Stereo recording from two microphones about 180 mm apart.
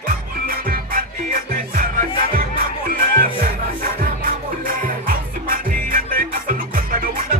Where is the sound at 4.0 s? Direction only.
50° right (ahead or behind).